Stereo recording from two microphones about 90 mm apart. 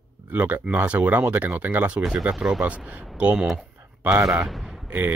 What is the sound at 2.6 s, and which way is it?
Speech, 15° right (ahead or behind).